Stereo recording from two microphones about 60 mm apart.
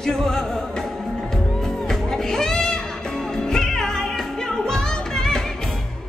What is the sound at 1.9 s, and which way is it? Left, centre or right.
Music, centre.